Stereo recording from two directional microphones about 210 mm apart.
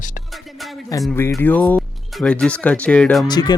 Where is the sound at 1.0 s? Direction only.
10° left (ahead or behind).